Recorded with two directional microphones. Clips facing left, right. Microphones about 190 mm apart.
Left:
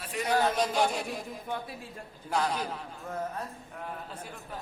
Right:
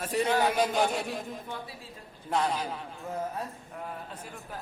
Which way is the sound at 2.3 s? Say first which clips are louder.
Right 1 dB; centre (ahead or behind).